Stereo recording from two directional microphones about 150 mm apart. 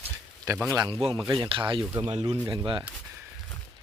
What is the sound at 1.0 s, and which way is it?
Speech, 40° right (ahead or behind).